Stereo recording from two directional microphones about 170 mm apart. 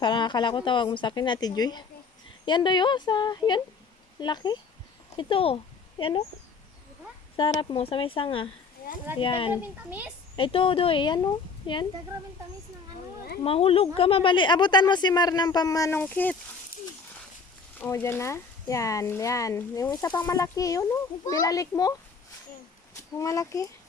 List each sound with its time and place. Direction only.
0.0 s speech: 25° left (ahead or behind)
7.3 s speech: 30° left (ahead or behind)
13.4 s speech: 35° left (ahead or behind); by 16.4 s 10° left (ahead or behind)
17.7 s speech: 15° left (ahead or behind)
23.0 s speech: 20° left (ahead or behind)